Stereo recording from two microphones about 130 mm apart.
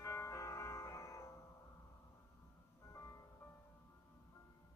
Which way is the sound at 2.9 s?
20° left (ahead or behind).